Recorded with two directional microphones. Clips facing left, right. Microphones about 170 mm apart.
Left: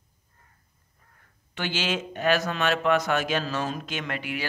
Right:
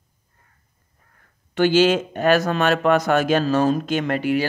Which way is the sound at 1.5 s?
45° right (ahead or behind).